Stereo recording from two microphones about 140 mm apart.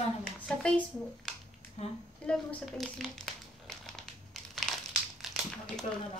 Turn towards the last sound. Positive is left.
turn(degrees=0)  # may be behind; listen again after turning